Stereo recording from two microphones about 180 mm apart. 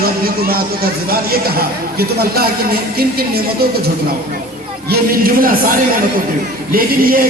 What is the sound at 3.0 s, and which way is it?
Speech, 60° right (ahead or behind).